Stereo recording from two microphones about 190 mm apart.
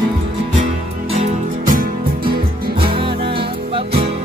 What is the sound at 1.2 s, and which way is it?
Music, 45° right (ahead or behind).